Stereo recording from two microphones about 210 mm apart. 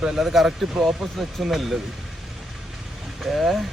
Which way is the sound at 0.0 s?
Centre (ahead or behind).